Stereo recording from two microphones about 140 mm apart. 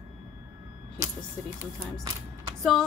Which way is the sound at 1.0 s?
20° right (ahead or behind).